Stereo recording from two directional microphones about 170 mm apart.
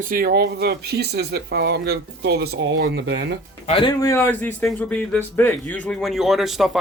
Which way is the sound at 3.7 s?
30° left (ahead or behind).